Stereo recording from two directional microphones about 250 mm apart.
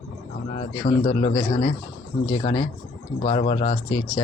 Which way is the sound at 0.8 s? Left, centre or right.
Left.